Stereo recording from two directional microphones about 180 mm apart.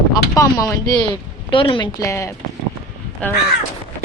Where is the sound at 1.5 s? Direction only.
30° left (ahead or behind).